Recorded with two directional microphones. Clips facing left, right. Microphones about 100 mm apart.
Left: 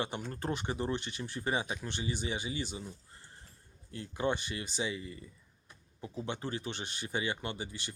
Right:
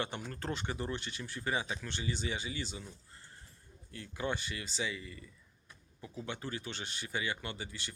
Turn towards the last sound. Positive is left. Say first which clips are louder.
# left 3 dB
turn(degrees=20)  # may be behind; listen again after turning